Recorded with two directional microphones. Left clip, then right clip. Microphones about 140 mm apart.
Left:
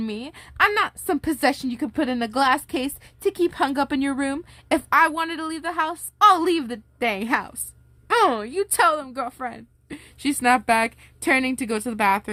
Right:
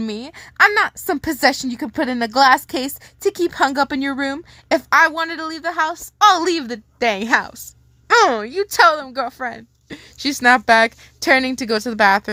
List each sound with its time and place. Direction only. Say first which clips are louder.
0.0 s a woman's voice: right 4 dB; 20° right (ahead or behind)